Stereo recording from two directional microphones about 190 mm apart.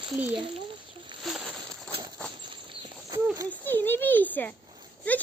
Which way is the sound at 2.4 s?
25° right (ahead or behind).